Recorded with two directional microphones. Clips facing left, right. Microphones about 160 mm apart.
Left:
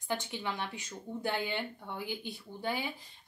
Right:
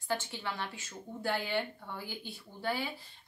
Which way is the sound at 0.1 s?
20° left (ahead or behind).